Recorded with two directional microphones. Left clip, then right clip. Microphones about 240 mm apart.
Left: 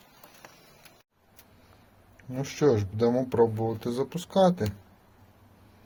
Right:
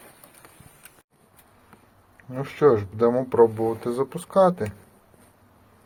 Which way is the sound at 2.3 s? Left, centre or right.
Centre.